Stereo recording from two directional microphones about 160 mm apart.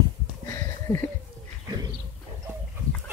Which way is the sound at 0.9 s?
5° right (ahead or behind).